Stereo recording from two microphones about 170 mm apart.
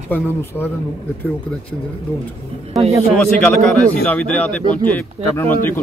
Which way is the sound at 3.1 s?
5° left (ahead or behind).